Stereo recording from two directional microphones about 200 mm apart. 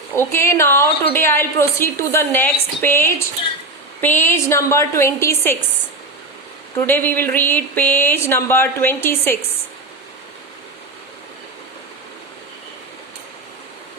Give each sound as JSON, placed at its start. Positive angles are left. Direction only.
{"t": 0.2, "sound": "a woman's voice", "side_deg": 15}
{"t": 6.7, "sound": "a woman's voice", "side_deg": 10}